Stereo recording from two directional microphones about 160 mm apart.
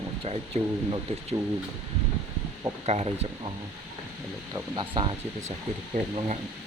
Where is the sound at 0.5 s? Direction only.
40° right (ahead or behind).